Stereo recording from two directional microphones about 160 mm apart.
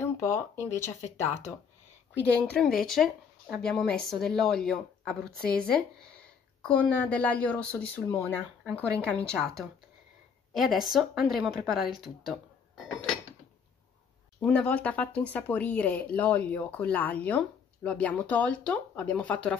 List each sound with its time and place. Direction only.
0.0 s speech: 15° left (ahead or behind)
6.7 s speech: 10° left (ahead or behind)
14.4 s speech: 10° left (ahead or behind)